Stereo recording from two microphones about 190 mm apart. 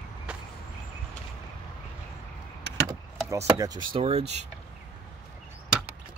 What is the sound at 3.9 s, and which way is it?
Speech, 30° right (ahead or behind).